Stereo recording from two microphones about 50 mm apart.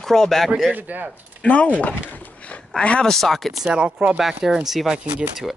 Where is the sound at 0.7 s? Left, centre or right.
Right.